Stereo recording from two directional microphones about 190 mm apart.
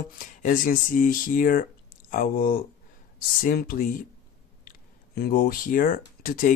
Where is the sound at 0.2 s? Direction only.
45° left (ahead or behind).